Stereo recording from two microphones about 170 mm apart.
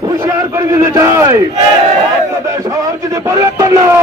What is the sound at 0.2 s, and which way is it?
A man's voice, 15° right (ahead or behind).